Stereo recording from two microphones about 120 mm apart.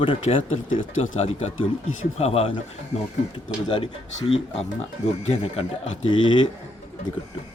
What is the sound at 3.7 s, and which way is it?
Speech, 45° left (ahead or behind).